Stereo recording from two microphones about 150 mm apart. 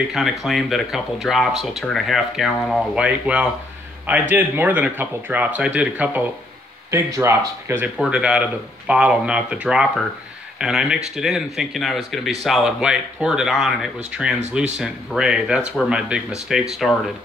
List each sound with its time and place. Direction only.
0.1 s speech: centre (ahead or behind)